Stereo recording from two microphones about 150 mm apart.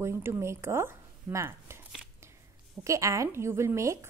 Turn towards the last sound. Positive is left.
turn(degrees=-20)  # may be behind; listen again after turning